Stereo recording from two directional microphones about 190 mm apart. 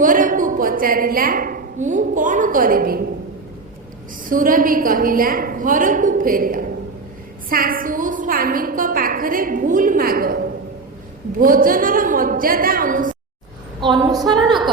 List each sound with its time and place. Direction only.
0.0 s a woman's voice: 45° right (ahead or behind)
4.3 s a woman's voice: 45° right (ahead or behind)
13.8 s a sound: 20° right (ahead or behind)